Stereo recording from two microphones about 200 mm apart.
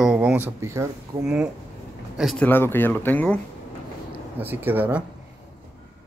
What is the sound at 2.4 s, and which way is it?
Speech, 10° left (ahead or behind).